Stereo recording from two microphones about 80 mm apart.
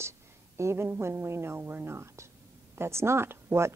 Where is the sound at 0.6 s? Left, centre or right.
Right.